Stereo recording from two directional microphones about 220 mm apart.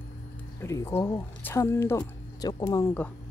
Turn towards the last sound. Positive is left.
turn(degrees=10)  # may be behind; listen again after turning